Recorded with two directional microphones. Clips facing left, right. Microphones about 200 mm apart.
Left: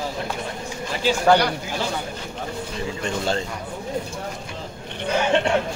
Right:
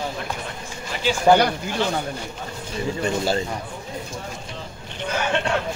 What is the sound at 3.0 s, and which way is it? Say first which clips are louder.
Speech: right 2 dB; 5° right (ahead or behind).